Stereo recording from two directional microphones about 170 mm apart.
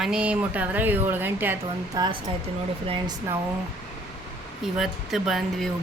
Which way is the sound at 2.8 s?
30° right (ahead or behind).